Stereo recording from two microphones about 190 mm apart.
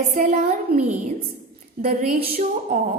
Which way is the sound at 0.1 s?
40° right (ahead or behind).